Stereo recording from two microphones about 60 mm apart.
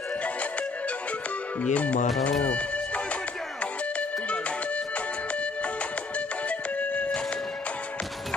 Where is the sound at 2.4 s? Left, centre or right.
Left.